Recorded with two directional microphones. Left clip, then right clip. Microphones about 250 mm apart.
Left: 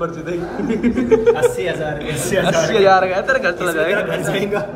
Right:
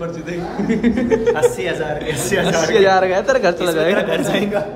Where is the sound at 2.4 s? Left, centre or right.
Centre.